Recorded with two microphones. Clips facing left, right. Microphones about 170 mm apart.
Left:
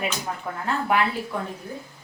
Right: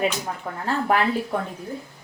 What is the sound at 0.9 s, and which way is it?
Speech, 40° right (ahead or behind).